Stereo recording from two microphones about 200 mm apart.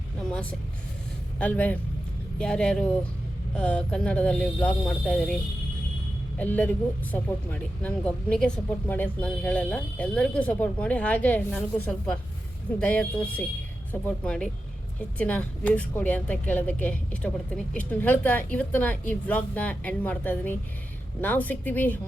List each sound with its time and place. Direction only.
1.4 s speech: 10° left (ahead or behind)
12.8 s speech: 5° left (ahead or behind)